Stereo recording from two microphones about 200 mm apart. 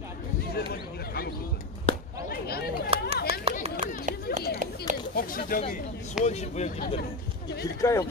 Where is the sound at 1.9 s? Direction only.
25° left (ahead or behind).